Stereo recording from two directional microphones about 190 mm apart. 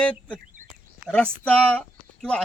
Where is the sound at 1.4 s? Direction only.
5° left (ahead or behind).